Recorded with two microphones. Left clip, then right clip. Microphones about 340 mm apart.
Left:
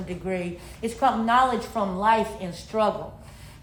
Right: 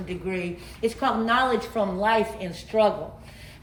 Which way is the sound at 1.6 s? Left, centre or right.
Left.